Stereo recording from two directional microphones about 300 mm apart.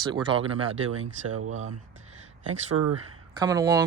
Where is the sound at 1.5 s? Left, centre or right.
Right.